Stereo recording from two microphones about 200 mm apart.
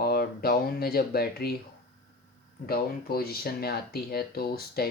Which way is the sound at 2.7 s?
50° left (ahead or behind).